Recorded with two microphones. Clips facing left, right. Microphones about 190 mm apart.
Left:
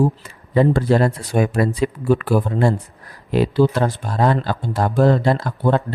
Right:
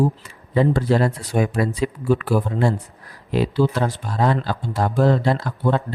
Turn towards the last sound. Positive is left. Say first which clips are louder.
# left 3 dB
turn(degrees=50)  # may be behind; listen again after turning